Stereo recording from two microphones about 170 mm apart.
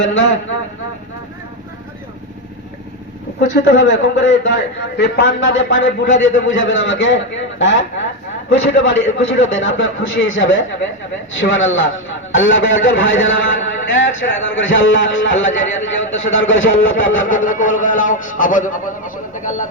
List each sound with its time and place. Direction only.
0.0 s a man's voice: 90° left
3.5 s a man's voice: 90° left
17.2 s speech: 50° left (ahead or behind)